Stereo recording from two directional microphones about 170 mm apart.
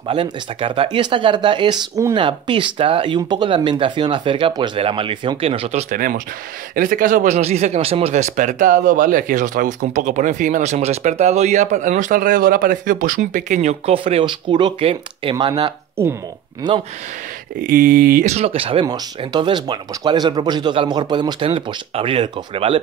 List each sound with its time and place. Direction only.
0.1 s speech: 30° right (ahead or behind)
5.9 s speech: 55° right (ahead or behind); by 15.7 s 25° right (ahead or behind)
17.6 s speech: 60° right (ahead or behind)
18.2 s speech: 40° right (ahead or behind)